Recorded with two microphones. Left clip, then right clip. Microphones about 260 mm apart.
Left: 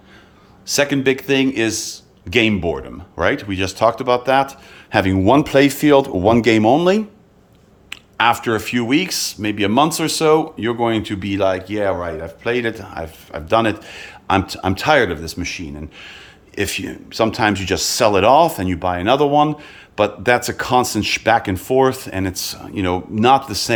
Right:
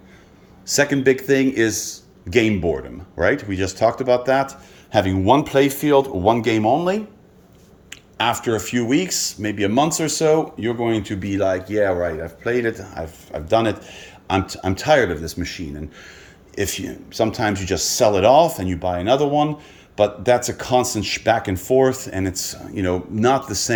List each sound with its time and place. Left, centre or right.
0.6 s a man's voice: centre; by 7.0 s left
7.9 s speech: centre